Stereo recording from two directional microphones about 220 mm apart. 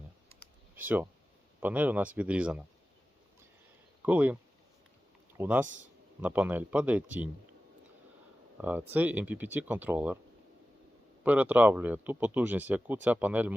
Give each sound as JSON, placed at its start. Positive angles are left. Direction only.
{"t": 0.8, "sound": "speech", "side_deg": -10}
{"t": 4.0, "sound": "speech", "side_deg": -5}
{"t": 5.4, "sound": "speech", "side_deg": -5}
{"t": 8.6, "sound": "speech", "side_deg": -10}
{"t": 11.2, "sound": "speech", "side_deg": -5}